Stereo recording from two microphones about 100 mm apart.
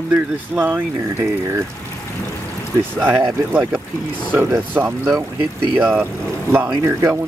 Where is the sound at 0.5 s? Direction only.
20° right (ahead or behind).